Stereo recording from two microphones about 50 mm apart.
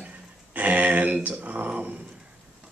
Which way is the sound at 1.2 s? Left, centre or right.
Right.